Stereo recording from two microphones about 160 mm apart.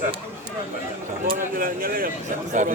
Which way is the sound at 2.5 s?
50° right (ahead or behind).